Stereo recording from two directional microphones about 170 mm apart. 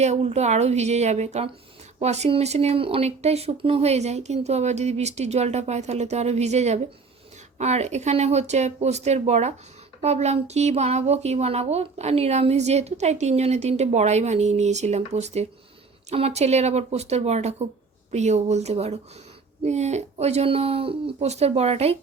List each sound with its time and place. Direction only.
0.0 s speech: 40° right (ahead or behind)